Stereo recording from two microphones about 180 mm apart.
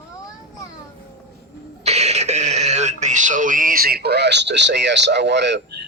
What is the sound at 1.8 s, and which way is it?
Speech, 35° right (ahead or behind).